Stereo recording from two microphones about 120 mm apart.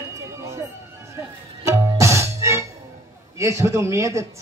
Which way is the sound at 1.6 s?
25° right (ahead or behind).